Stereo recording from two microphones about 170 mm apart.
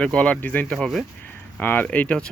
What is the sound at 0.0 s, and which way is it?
Speech, 5° left (ahead or behind).